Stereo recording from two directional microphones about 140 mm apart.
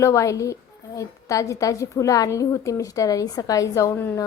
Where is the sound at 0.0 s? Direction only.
20° left (ahead or behind).